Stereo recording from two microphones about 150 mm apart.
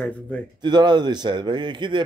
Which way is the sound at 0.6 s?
30° right (ahead or behind).